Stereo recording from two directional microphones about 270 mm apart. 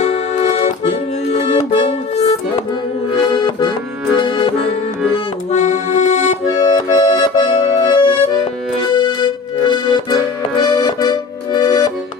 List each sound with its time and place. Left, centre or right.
0.0 s accordion: left
1.3 s music: left
3.2 s accordion: centre